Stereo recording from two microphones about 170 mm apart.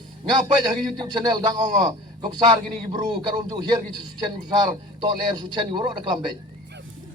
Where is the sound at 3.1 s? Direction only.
25° right (ahead or behind).